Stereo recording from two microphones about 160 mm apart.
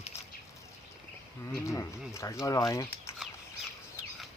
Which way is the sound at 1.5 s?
20° left (ahead or behind).